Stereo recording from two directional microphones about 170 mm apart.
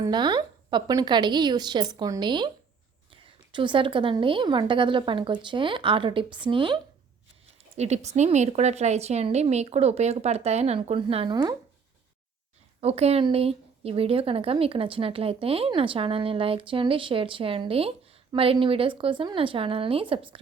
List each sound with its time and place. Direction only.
0.0 s a woman's voice: 25° right (ahead or behind)
3.5 s a woman's voice: 30° right (ahead or behind)
7.8 s a woman's voice: 40° right (ahead or behind)
12.8 s a woman's voice: 35° right (ahead or behind)